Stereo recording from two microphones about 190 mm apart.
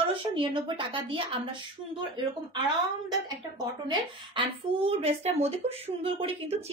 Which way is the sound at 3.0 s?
20° right (ahead or behind).